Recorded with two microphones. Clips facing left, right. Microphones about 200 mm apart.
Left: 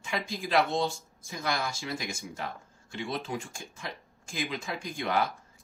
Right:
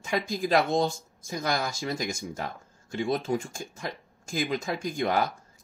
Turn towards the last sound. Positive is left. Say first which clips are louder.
# right 3 dB
turn(degrees=-40)  # may be behind; listen again after turning